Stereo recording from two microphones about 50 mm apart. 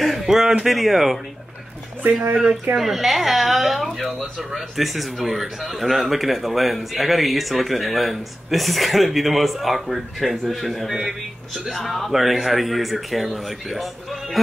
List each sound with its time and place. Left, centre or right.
0.0 s speech: centre
2.0 s speech: right
2.7 s speech: centre
11.0 s speech: centre
11.7 s speech: centre